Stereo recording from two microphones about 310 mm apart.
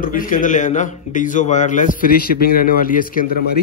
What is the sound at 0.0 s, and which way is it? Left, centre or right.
Speech, left.